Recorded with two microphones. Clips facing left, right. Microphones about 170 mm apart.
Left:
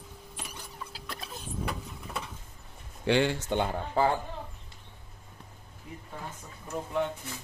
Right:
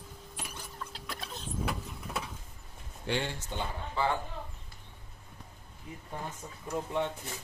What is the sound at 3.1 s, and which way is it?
Speech, 90° left.